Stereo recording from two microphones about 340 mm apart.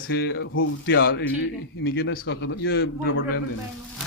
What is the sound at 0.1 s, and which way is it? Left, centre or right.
A man's voice, left.